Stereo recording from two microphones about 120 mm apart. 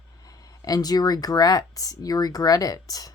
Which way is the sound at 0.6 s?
30° left (ahead or behind).